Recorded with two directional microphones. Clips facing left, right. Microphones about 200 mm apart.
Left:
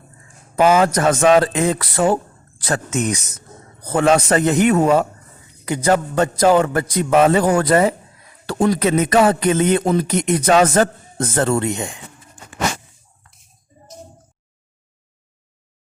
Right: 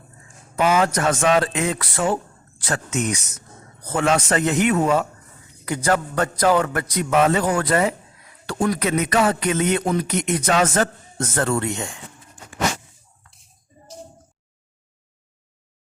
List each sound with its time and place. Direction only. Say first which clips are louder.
0.5 s speech: left 5 dB; 35° left (ahead or behind)
5.6 s a man's voice: left 4 dB; 20° left (ahead or behind)
11.7 s speech: left 4 dB; 15° left (ahead or behind)